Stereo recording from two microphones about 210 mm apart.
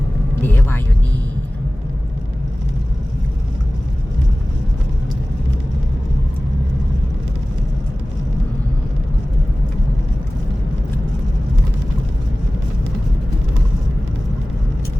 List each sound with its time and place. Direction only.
0.4 s music: 10° left (ahead or behind)